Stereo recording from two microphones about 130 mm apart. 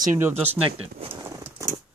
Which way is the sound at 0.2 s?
20° right (ahead or behind).